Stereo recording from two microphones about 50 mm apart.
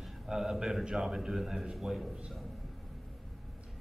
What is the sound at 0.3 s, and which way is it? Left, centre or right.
A man's voice, centre.